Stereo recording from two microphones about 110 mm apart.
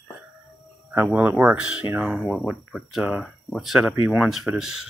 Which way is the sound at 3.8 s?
25° right (ahead or behind).